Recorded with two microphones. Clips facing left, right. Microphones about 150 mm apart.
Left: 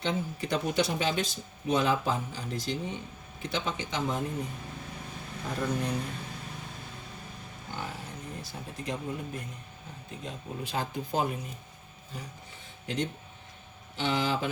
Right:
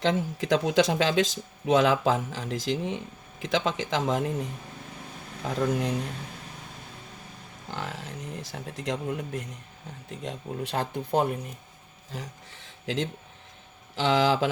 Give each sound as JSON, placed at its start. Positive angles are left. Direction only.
{"t": 0.0, "sound": "speech", "side_deg": -90}
{"t": 5.4, "sound": "speech", "side_deg": -90}
{"t": 7.7, "sound": "speech", "side_deg": -85}
{"t": 10.1, "sound": "speech", "side_deg": -70}
{"t": 12.1, "sound": "speech", "side_deg": -90}